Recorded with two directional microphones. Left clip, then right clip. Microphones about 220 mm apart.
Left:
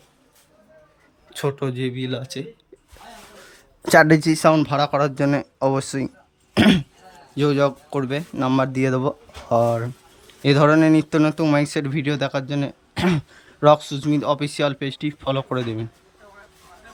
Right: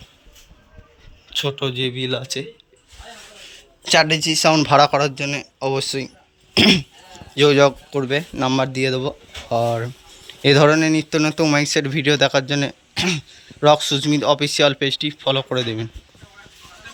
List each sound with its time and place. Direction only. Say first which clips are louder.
1.3 s speech: right 3 dB; 25° left (ahead or behind); by 2.5 s 10° left (ahead or behind)
3.8 s speech: left 2 dB; 30° left (ahead or behind)
4.5 s speech: right 5 dB; 5° left (ahead or behind)
6.5 s throat clearing: right 4 dB; 15° left (ahead or behind)
7.3 s speech: right 6 dB; 5° left (ahead or behind)